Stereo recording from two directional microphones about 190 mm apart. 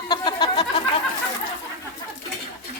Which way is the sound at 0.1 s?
25° left (ahead or behind).